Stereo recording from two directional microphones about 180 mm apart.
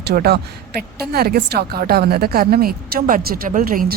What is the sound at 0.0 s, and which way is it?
A woman's voice, 60° right (ahead or behind).